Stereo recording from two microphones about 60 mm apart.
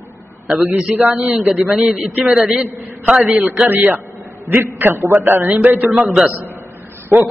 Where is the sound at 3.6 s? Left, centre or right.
Right.